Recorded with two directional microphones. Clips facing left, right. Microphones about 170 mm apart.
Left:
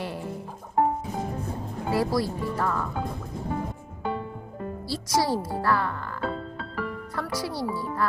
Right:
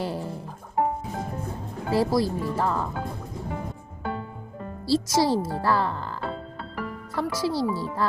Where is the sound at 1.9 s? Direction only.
25° right (ahead or behind).